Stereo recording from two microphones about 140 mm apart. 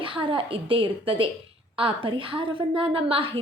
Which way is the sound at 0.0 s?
35° right (ahead or behind).